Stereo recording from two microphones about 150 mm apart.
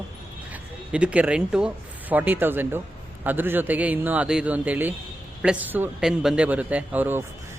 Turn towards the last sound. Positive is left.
turn(degrees=-10)  # may be behind; listen again after turning